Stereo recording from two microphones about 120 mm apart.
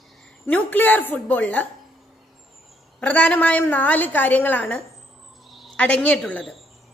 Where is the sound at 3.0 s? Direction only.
10° left (ahead or behind).